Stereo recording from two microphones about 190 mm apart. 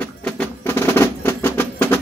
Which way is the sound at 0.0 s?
5° left (ahead or behind).